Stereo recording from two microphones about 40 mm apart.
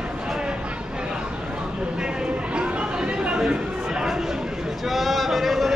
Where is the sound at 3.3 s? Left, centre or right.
Centre.